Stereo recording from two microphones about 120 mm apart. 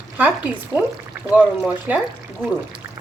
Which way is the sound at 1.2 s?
10° right (ahead or behind).